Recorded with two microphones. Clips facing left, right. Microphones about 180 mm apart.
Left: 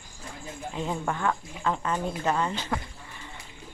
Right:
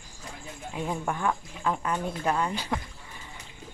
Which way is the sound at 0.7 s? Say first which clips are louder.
Even; 10° right (ahead or behind).